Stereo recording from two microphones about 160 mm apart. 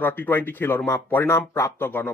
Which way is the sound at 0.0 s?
10° left (ahead or behind).